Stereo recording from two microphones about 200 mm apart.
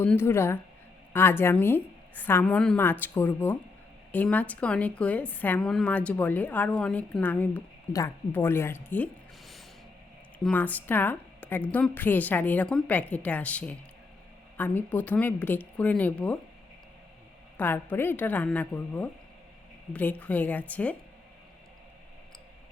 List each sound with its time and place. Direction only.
0.0 s a woman's voice: 10° left (ahead or behind)
10.4 s a woman's voice: 10° left (ahead or behind)
17.6 s a woman's voice: 10° left (ahead or behind)